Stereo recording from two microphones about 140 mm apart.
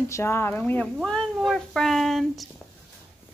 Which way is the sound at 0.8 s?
5° left (ahead or behind).